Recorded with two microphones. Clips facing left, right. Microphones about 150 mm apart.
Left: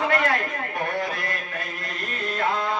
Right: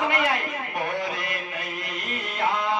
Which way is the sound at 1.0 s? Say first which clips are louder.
Left 1 dB; 20° right (ahead or behind).